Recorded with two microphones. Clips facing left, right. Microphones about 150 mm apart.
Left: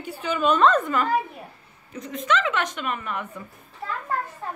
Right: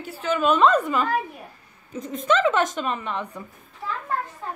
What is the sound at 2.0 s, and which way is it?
A woman's voice, 45° right (ahead or behind).